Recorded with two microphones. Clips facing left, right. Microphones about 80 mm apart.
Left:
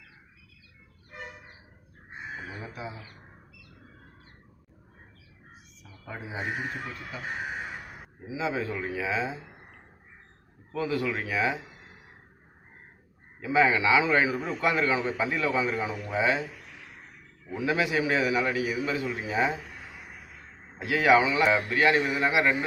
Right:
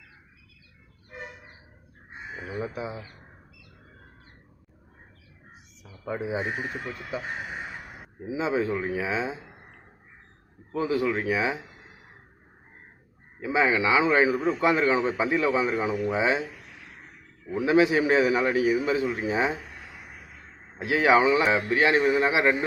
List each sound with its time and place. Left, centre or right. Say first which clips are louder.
2.6 s a sound: right 7 dB; right
6.1 s a man's voice: right 8 dB; right
8.3 s a man's voice: right 4 dB; right
10.7 s a man's voice: right 3 dB; right
13.4 s a man's voice: even; centre
17.7 s a man's voice: right 6 dB; right
20.7 s a man's voice: right 1 dB; right